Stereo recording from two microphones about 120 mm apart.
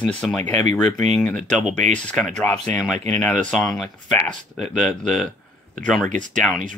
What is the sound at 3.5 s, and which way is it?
Speech, centre (ahead or behind).